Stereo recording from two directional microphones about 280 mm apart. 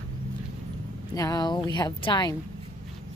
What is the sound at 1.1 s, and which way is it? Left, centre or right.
A woman's voice, centre.